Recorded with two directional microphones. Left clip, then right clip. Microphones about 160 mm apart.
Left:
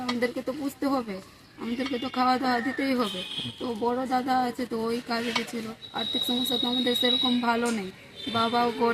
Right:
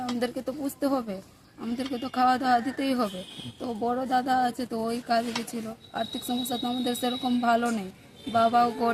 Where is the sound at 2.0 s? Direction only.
40° right (ahead or behind).